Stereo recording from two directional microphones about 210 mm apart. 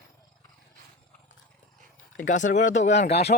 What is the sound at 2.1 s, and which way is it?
Speech, 35° left (ahead or behind).